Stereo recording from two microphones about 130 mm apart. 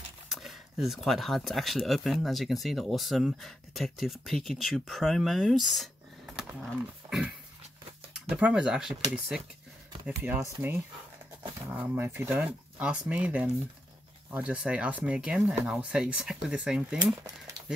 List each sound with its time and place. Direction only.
0.3 s speech: centre (ahead or behind)
6.3 s a sound: 5° right (ahead or behind)
8.1 s speech: 10° right (ahead or behind)
10.0 s speech: 15° right (ahead or behind)